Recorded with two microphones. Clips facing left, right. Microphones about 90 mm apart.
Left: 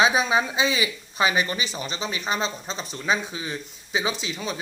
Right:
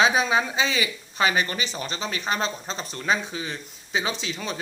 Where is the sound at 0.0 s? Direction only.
15° left (ahead or behind).